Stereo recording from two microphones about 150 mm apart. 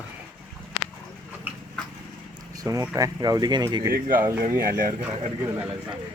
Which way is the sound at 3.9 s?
70° right (ahead or behind).